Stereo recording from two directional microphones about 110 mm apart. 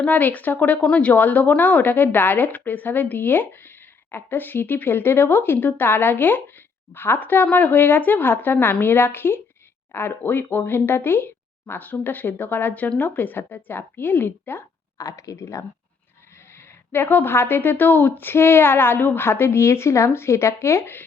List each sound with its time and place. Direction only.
0.0 s speech: 15° left (ahead or behind)
14.9 s speech: 30° left (ahead or behind)
16.9 s speech: 20° left (ahead or behind)